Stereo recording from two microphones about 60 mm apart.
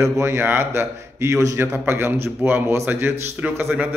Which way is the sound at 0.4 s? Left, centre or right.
Right.